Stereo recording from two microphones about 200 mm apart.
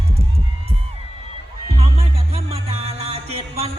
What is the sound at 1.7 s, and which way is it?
Music, 30° right (ahead or behind).